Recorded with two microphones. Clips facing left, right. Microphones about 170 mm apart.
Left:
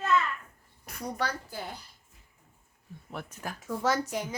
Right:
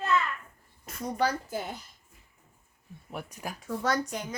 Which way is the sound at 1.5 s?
20° right (ahead or behind).